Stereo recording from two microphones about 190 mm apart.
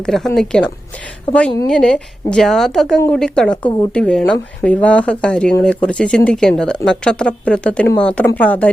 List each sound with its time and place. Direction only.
0.0 s a woman's voice: 5° left (ahead or behind)